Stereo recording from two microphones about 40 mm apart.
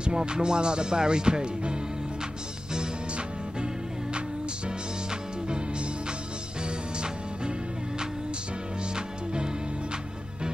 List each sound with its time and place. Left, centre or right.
0.0 s music: right
8.9 s music: right